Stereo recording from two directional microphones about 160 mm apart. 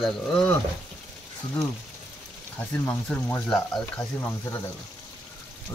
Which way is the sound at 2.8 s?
5° left (ahead or behind).